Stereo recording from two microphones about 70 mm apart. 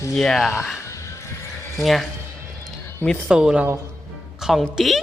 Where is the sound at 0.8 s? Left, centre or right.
Left.